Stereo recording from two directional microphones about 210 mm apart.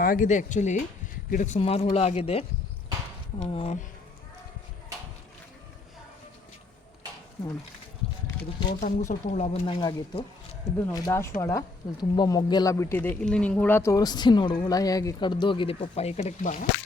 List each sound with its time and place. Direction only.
0.0 s speech: 40° left (ahead or behind)
9.0 s speech: 35° left (ahead or behind)
10.8 s speech: 15° left (ahead or behind); by 16.6 s 40° left (ahead or behind)